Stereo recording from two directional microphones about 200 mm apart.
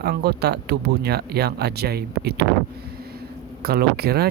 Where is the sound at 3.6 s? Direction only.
50° right (ahead or behind).